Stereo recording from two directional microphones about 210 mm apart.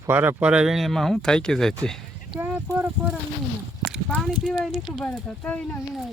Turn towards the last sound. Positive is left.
turn(degrees=5)  # may be behind; listen again after turning